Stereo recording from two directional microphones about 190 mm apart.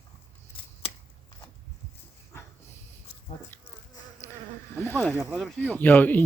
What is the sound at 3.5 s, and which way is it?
Insect, 10° left (ahead or behind).